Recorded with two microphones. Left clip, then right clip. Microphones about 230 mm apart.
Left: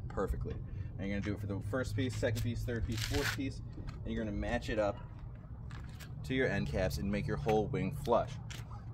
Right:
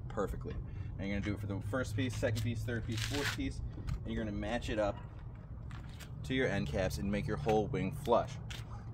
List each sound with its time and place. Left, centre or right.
0.1 s a sound: centre
0.9 s speech: centre
6.2 s speech: centre